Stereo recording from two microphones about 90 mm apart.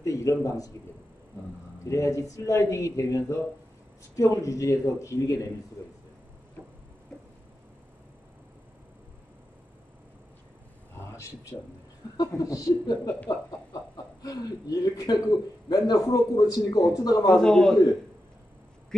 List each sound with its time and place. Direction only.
0.0 s a man's voice: 40° left (ahead or behind)
1.9 s speech: 35° left (ahead or behind)
12.2 s speech: 40° left (ahead or behind)
14.2 s a man's voice: 45° left (ahead or behind)
17.3 s a man's voice: 5° left (ahead or behind)